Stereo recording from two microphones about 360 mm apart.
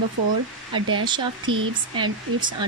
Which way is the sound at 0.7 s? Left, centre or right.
Centre.